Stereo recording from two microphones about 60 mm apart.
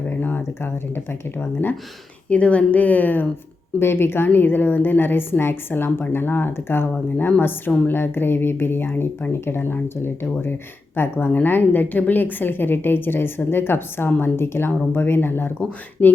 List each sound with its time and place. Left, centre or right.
0.2 s a woman's voice: left
2.3 s a woman's voice: left
3.8 s a woman's voice: left